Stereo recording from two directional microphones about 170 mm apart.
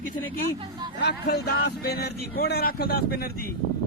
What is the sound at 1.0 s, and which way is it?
A man's voice, 70° left (ahead or behind).